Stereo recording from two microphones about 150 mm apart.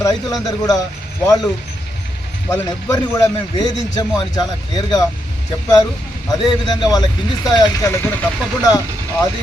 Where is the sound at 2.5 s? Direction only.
20° left (ahead or behind).